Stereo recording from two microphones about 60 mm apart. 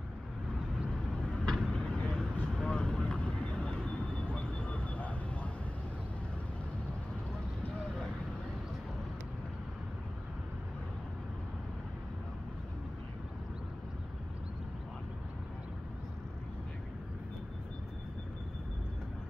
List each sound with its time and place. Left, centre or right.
0.9 s vehicle: centre